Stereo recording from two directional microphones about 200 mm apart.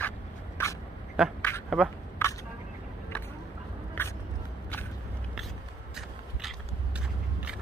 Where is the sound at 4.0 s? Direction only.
10° left (ahead or behind).